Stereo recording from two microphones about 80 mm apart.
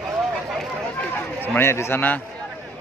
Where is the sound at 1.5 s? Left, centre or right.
Left.